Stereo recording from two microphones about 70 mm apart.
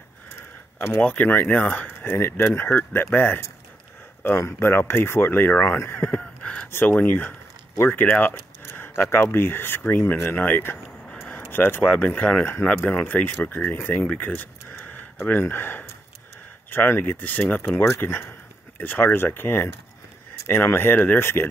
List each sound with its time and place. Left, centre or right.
1.0 s speech: left
2.0 s speech: left
5.9 s a sound: left
6.7 s speech: left
14.2 s a sound: left
15.2 s speech: left